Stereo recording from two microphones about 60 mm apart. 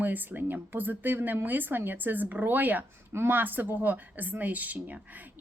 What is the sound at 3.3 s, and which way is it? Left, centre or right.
A woman's voice, right.